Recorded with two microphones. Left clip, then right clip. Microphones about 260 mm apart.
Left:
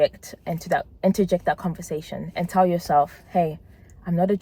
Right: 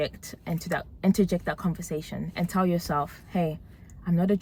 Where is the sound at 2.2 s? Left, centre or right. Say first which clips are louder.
Left 9 dB; left.